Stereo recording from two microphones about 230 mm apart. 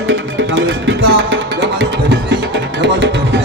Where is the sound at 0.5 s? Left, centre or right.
Right.